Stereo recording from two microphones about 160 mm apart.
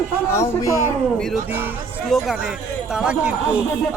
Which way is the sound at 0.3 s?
20° left (ahead or behind).